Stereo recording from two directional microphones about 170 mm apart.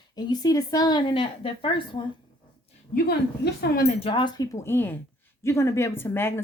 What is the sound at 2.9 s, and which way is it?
Speech, 65° left (ahead or behind).